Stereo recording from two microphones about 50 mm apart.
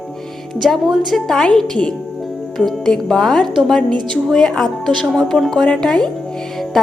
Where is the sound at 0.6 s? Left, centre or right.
Centre.